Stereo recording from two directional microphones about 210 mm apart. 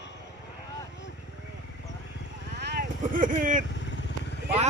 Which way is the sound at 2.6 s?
50° right (ahead or behind).